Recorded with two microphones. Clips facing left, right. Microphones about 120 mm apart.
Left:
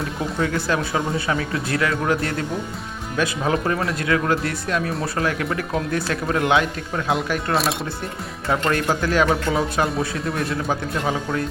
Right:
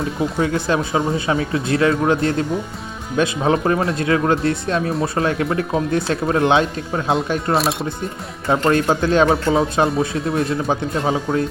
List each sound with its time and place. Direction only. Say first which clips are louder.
0.3 s speech: right 2 dB; 25° right (ahead or behind)
7.5 s speech: right 3 dB; centre (ahead or behind)
8.4 s speech: right 5 dB; 25° right (ahead or behind)